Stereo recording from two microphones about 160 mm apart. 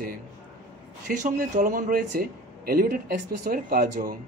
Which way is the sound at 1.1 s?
55° right (ahead or behind).